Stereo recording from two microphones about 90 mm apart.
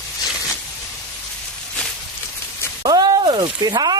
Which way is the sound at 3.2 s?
65° right (ahead or behind).